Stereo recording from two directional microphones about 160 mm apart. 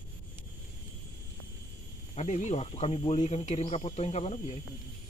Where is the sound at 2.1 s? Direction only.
45° left (ahead or behind).